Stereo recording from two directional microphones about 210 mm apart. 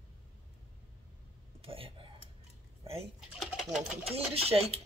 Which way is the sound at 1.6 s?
25° right (ahead or behind).